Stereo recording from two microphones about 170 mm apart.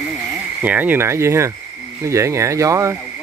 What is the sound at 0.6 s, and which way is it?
Speech, 10° right (ahead or behind).